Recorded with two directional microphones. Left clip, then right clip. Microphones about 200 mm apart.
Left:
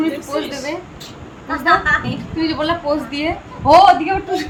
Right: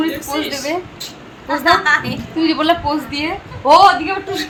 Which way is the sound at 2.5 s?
25° right (ahead or behind).